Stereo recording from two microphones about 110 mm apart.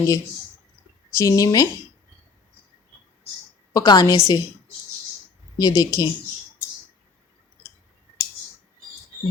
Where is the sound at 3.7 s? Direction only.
35° left (ahead or behind).